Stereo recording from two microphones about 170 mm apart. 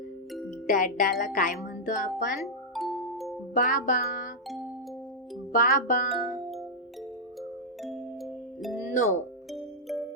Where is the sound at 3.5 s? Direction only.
50° left (ahead or behind).